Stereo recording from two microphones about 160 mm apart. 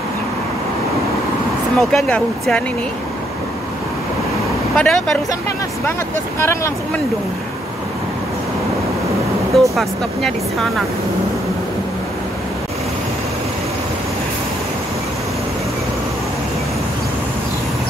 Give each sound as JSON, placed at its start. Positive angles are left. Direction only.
{"t": 1.8, "sound": "speech", "side_deg": 0}
{"t": 4.7, "sound": "speech", "side_deg": 5}
{"t": 6.4, "sound": "speech", "side_deg": 15}
{"t": 9.5, "sound": "speech", "side_deg": 0}